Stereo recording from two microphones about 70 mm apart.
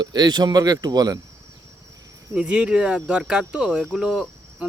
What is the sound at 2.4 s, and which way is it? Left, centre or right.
Speech, centre.